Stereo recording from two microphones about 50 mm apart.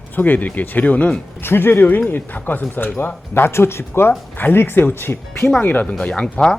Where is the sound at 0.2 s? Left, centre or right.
Left.